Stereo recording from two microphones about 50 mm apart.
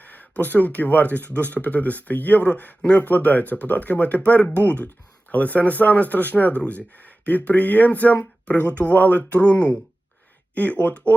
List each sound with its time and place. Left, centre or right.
0.0 s speech: left